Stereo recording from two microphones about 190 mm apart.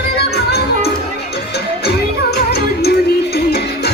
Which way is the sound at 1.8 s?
60° left (ahead or behind).